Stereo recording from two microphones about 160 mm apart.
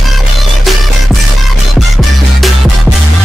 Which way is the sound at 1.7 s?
Centre (ahead or behind).